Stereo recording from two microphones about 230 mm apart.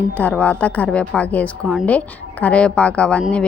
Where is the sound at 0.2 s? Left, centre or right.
Centre.